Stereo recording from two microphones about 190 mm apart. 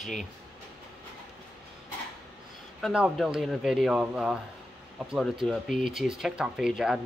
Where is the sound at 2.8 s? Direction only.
Centre (ahead or behind).